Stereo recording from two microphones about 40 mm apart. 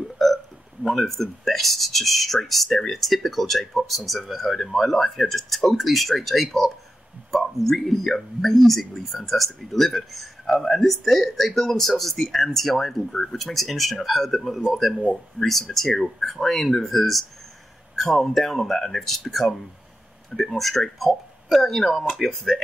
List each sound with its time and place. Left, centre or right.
0.2 s burping: centre
0.8 s speech: centre